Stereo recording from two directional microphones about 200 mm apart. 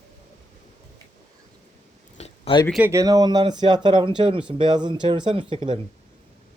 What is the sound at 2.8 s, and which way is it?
Speech, 15° right (ahead or behind).